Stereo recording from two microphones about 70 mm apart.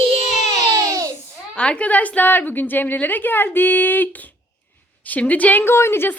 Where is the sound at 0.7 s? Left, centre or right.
Right.